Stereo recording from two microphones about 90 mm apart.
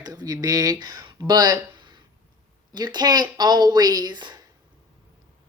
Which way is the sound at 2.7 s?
50° right (ahead or behind).